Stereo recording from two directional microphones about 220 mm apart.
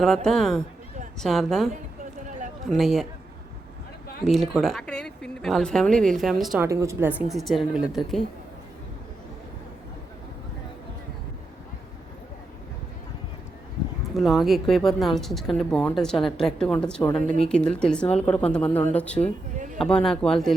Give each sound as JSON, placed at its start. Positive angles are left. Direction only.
{"t": 0.3, "sound": "speech", "side_deg": 0}
{"t": 4.2, "sound": "speech", "side_deg": 0}
{"t": 6.7, "sound": "speech", "side_deg": -15}
{"t": 14.1, "sound": "speech", "side_deg": 0}
{"t": 19.5, "sound": "a sound", "side_deg": -35}
{"t": 19.8, "sound": "speech", "side_deg": 5}